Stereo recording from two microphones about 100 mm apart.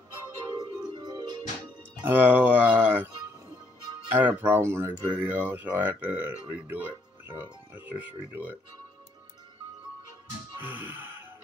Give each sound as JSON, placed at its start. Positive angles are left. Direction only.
{"t": 0.9, "sound": "music", "side_deg": -45}
{"t": 2.0, "sound": "speech", "side_deg": -20}
{"t": 4.1, "sound": "speech", "side_deg": -20}
{"t": 10.7, "sound": "speech", "side_deg": -20}